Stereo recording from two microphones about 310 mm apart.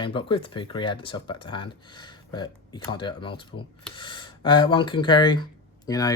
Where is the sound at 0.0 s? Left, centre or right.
Centre.